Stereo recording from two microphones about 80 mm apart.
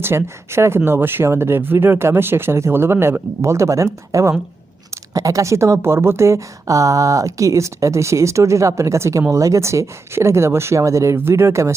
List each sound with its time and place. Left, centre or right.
0.0 s a woman's voice: right
5.1 s a woman's voice: right